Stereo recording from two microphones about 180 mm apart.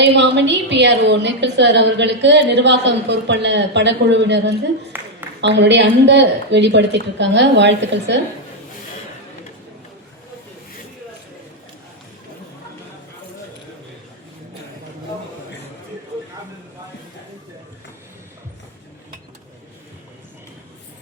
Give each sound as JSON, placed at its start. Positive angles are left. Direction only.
{"t": 0.0, "sound": "a woman's voice", "side_deg": -80}
{"t": 4.9, "sound": "a sound", "side_deg": -10}
{"t": 5.4, "sound": "a woman's voice", "side_deg": -80}